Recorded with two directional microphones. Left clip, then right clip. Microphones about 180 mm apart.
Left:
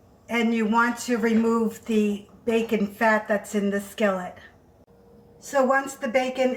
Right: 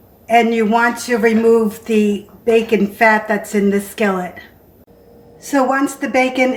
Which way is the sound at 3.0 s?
35° right (ahead or behind).